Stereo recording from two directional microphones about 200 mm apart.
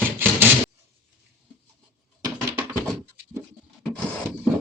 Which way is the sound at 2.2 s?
15° right (ahead or behind).